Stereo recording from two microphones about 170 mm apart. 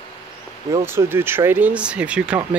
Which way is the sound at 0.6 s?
15° right (ahead or behind).